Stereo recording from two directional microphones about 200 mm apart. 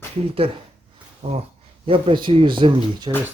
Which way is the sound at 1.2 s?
30° right (ahead or behind).